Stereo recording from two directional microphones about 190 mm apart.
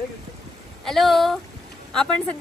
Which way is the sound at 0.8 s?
Centre (ahead or behind).